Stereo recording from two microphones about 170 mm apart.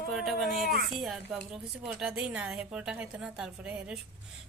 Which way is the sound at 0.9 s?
Centre (ahead or behind).